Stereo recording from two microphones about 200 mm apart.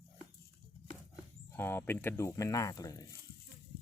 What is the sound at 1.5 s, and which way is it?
Speech, 10° left (ahead or behind).